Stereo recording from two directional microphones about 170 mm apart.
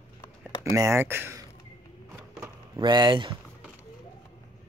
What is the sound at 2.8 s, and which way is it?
Speech, 25° right (ahead or behind).